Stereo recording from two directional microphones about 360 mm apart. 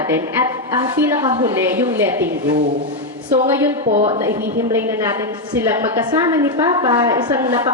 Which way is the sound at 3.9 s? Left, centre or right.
Centre.